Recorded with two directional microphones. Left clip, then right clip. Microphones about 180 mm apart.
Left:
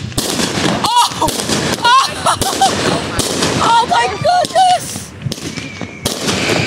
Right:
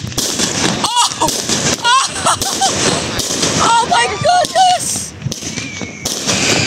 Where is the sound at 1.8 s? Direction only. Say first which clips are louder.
Left 4 dB; centre (ahead or behind).